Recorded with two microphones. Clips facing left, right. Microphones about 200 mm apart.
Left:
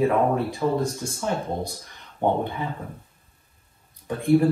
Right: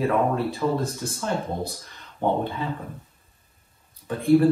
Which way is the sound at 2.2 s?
15° left (ahead or behind).